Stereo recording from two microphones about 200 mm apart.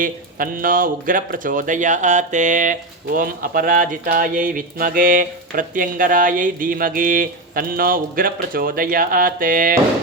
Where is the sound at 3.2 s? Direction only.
45° right (ahead or behind).